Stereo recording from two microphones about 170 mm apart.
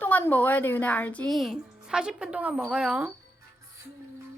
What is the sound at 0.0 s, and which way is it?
Speech, 10° left (ahead or behind).